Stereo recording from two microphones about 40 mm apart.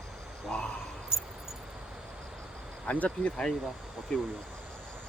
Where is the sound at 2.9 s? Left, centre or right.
Left.